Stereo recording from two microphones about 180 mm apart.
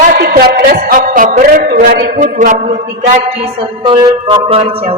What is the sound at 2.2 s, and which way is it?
Speech, 45° right (ahead or behind).